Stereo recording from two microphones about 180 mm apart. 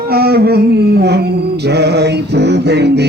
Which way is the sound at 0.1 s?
60° right (ahead or behind).